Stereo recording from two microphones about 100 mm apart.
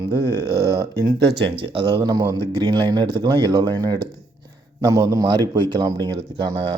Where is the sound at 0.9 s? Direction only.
40° right (ahead or behind).